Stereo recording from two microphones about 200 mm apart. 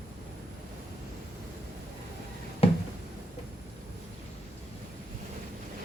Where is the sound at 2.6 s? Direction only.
30° left (ahead or behind).